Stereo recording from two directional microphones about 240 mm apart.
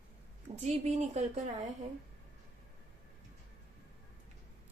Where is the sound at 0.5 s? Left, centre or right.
Right.